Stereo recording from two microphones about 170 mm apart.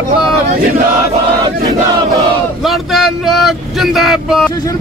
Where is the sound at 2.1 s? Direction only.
Centre (ahead or behind).